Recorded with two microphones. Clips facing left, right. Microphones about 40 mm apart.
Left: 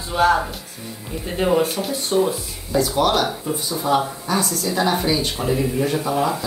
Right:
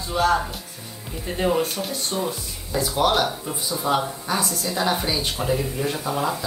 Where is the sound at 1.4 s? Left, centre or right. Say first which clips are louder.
Left 3 dB; centre.